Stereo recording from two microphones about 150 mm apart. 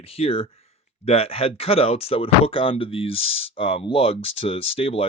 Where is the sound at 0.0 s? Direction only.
40° left (ahead or behind).